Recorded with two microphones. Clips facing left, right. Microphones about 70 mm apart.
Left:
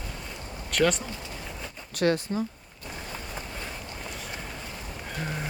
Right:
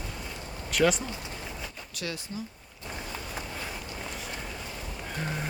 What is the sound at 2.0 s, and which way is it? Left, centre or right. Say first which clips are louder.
Speech: left 12 dB; left.